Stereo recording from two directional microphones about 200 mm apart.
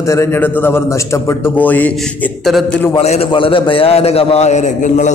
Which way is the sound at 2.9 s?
30° left (ahead or behind).